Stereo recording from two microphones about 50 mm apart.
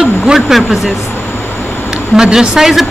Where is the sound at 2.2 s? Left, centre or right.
Centre.